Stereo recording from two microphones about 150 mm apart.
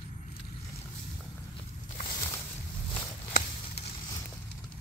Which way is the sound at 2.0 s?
25° left (ahead or behind).